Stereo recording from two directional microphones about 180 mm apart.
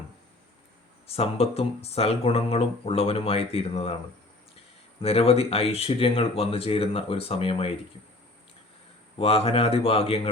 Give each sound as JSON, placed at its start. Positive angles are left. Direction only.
{"t": 1.0, "sound": "speech", "side_deg": 35}
{"t": 4.9, "sound": "speech", "side_deg": 35}
{"t": 9.1, "sound": "speech", "side_deg": 35}